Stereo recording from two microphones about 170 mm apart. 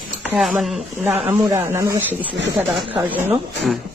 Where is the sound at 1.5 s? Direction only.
15° right (ahead or behind).